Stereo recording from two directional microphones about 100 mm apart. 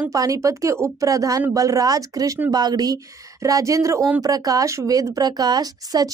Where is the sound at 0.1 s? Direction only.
35° right (ahead or behind).